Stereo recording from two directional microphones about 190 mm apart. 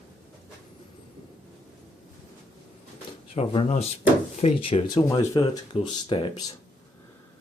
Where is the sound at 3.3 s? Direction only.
30° left (ahead or behind).